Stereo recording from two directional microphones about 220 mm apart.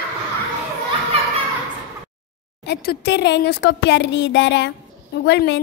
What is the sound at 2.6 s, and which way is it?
A woman's voice, 45° left (ahead or behind).